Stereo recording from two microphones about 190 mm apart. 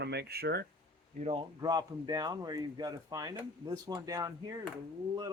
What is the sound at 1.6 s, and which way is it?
Speech, 20° right (ahead or behind).